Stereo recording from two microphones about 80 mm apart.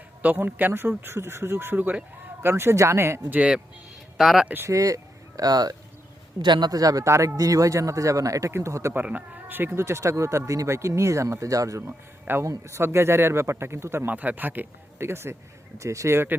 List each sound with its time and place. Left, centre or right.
0.2 s speech: right
3.2 s speech: right
4.2 s speech: centre
4.4 s speech: right
4.7 s speech: right
8.9 s speech: right